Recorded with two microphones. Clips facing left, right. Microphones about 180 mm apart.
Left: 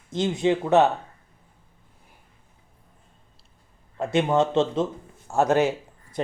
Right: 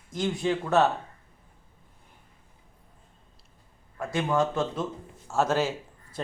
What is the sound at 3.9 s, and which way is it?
A man's voice, 25° left (ahead or behind).